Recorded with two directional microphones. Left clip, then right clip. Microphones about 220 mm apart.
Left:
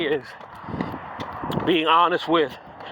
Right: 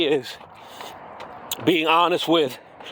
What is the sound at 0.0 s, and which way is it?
Speech, 50° right (ahead or behind).